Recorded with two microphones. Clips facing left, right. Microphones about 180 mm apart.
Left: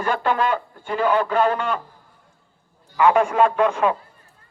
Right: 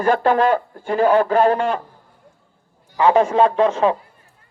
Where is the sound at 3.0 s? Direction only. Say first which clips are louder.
Right 2 dB; 30° right (ahead or behind).